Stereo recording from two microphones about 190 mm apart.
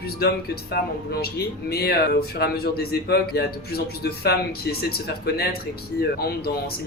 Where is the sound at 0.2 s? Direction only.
55° left (ahead or behind).